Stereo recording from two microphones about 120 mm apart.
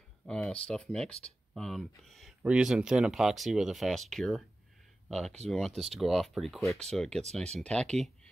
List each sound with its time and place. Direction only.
0.3 s speech: 10° left (ahead or behind)
5.8 s speech: centre (ahead or behind)